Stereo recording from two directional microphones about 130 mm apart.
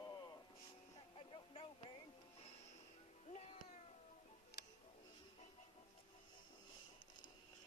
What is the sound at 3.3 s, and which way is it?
Cat, 60° left (ahead or behind).